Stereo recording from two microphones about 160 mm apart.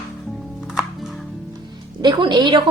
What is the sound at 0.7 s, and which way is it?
Music, centre (ahead or behind).